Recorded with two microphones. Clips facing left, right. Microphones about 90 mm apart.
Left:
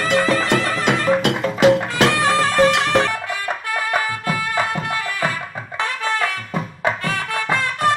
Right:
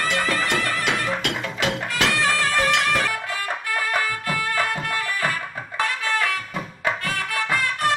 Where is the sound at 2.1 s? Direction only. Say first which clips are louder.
Left 5 dB; 20° left (ahead or behind).